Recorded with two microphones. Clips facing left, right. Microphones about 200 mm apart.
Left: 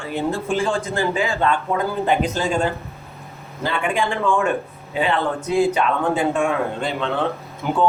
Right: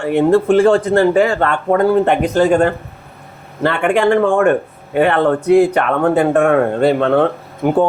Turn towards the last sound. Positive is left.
turn(degrees=-55)  # may be behind; listen again after turning